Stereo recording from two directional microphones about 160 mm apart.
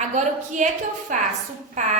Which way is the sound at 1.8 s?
45° right (ahead or behind).